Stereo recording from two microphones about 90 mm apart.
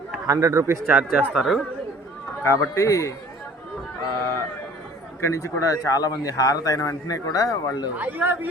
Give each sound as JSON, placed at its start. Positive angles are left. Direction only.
{"t": 0.3, "sound": "a man's voice", "side_deg": -35}
{"t": 0.9, "sound": "speech", "side_deg": -15}
{"t": 2.4, "sound": "a man's voice", "side_deg": 30}
{"t": 5.2, "sound": "a man's voice", "side_deg": 35}
{"t": 7.9, "sound": "a man's voice", "side_deg": -20}